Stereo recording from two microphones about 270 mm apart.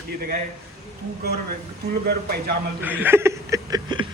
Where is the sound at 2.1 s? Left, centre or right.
Right.